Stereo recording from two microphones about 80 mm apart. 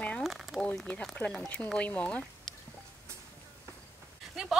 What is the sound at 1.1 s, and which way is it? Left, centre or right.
Speech, centre.